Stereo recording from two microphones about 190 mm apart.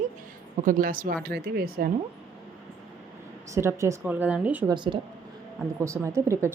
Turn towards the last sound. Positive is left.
turn(degrees=-15)  # may be behind; listen again after turning